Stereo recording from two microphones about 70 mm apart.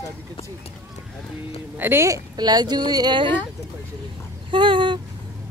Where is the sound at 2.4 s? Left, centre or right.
Right.